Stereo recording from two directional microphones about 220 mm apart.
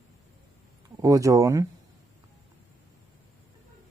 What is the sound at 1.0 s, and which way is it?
Speech, 15° right (ahead or behind).